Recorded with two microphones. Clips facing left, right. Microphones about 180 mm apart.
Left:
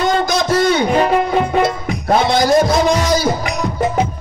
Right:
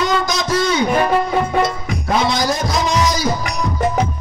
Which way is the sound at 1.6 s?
55° left (ahead or behind).